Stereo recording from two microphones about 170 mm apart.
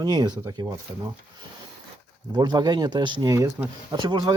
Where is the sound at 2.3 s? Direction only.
25° right (ahead or behind).